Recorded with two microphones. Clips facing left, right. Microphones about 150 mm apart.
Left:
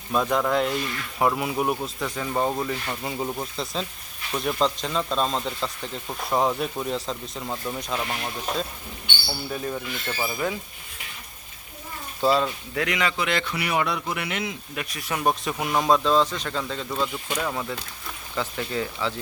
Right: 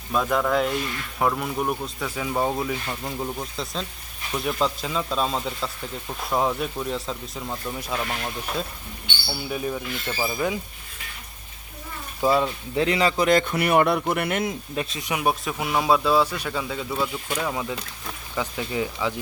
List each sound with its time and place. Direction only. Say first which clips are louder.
0.1 s speech: even; centre (ahead or behind)
9.3 s speech: right 2 dB; 10° right (ahead or behind)
12.2 s speech: right 1 dB; 15° right (ahead or behind)
12.7 s a man's voice: right 6 dB; 30° right (ahead or behind); by 14.5 s 50° right (ahead or behind)
14.8 s speech: right 2 dB; 25° right (ahead or behind)
15.2 s speech: left 1 dB; 5° right (ahead or behind)